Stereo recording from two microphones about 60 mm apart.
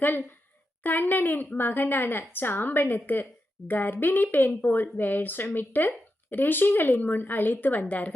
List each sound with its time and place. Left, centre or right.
0.0 s speech: left